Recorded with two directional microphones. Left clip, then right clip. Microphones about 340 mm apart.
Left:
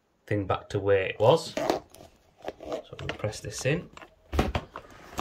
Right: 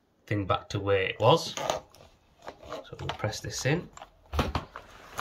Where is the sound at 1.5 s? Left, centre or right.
Centre.